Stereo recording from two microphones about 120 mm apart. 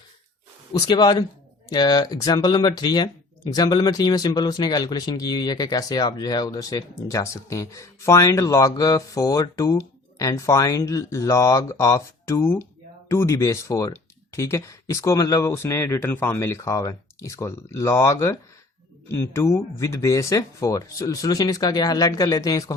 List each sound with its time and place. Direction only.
0.7 s speech: 35° left (ahead or behind)